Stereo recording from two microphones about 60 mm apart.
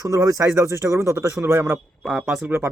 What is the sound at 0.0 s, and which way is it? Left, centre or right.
Speech, right.